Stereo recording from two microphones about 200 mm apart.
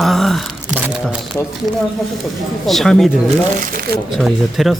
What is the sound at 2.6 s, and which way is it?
Speech, centre (ahead or behind).